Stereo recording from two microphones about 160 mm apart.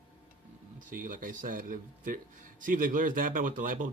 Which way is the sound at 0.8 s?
55° right (ahead or behind).